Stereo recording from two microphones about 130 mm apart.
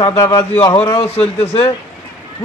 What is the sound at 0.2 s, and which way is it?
Speech, 35° left (ahead or behind).